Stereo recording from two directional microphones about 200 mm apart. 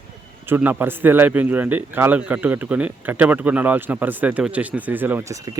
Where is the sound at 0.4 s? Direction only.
10° right (ahead or behind).